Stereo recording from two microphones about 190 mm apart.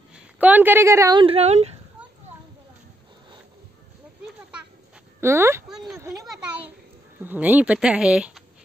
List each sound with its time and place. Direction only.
0.1 s a woman's voice: 10° right (ahead or behind)
1.2 s speech: 35° right (ahead or behind)
5.2 s speech: 15° right (ahead or behind)
5.7 s speech: centre (ahead or behind)
5.9 s speech: 15° right (ahead or behind)